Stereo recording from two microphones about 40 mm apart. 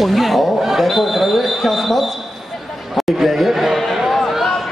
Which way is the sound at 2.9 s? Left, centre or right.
Centre.